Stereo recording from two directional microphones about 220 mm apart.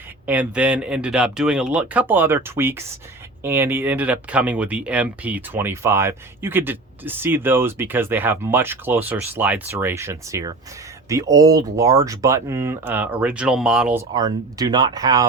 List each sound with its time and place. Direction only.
0.3 s speech: 5° right (ahead or behind)
14.1 s speech: 15° right (ahead or behind)